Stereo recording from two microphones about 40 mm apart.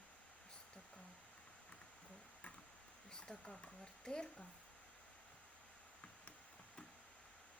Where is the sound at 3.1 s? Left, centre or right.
Centre.